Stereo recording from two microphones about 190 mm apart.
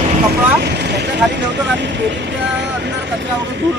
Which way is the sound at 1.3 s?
70° right (ahead or behind).